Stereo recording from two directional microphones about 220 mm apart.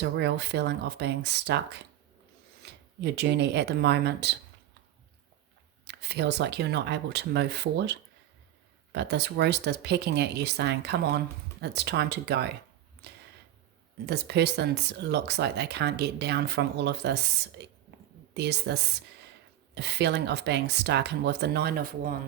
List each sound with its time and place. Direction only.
0.0 s a woman's voice: 50° right (ahead or behind)
3.0 s a woman's voice: 50° right (ahead or behind)
5.8 s a woman's voice: 50° right (ahead or behind)
14.1 s a woman's voice: 50° right (ahead or behind)
18.3 s a woman's voice: 50° right (ahead or behind)